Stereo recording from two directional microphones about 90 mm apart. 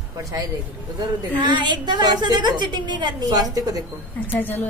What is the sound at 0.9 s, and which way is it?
A woman's voice, 55° right (ahead or behind).